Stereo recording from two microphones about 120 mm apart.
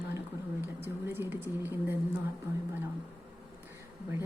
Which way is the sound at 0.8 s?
20° right (ahead or behind).